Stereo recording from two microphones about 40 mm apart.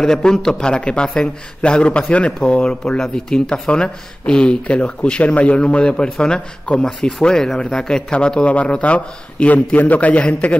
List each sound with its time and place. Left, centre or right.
0.0 s speech: centre
3.0 s a man's voice: centre; by 10.6 s left